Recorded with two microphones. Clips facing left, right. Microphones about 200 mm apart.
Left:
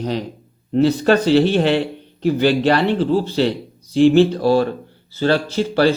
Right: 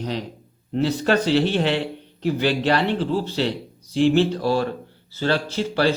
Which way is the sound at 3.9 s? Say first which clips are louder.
Left 6 dB; 50° left (ahead or behind).